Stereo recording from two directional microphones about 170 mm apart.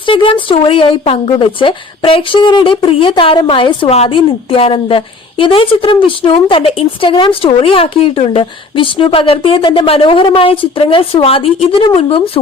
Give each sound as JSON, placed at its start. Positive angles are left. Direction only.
{"t": 0.0, "sound": "speech", "side_deg": 30}